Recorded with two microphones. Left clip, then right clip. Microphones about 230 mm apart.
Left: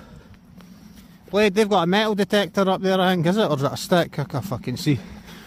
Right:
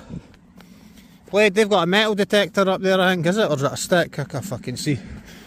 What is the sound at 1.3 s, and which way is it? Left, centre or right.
Speech, centre.